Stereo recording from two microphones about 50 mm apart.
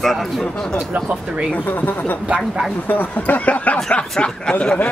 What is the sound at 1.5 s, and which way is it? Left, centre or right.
Speech, left.